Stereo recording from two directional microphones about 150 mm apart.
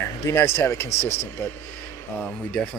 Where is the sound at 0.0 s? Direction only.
15° left (ahead or behind).